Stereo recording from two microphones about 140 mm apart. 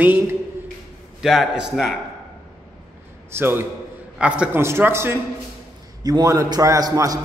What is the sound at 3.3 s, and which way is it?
A man's voice, 15° right (ahead or behind).